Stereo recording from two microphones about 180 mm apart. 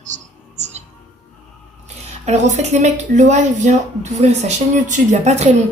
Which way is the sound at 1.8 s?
40° right (ahead or behind).